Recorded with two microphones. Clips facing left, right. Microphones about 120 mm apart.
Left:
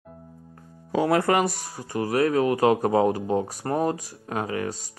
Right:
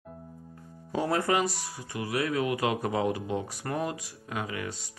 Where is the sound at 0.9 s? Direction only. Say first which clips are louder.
Left 6 dB; 75° left (ahead or behind).